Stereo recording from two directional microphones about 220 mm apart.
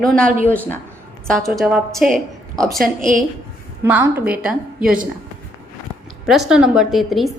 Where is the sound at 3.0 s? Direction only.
35° right (ahead or behind).